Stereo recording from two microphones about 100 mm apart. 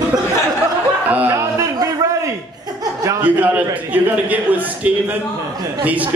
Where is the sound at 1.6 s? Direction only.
35° right (ahead or behind).